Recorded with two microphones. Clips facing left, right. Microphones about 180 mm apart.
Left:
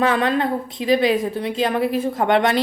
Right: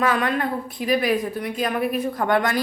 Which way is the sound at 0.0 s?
25° left (ahead or behind).